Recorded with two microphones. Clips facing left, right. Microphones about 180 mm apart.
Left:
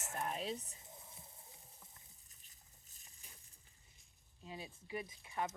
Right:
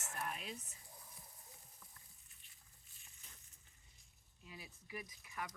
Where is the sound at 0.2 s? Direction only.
30° left (ahead or behind).